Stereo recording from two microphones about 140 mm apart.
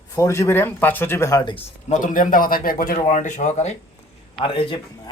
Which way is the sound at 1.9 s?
70° left (ahead or behind).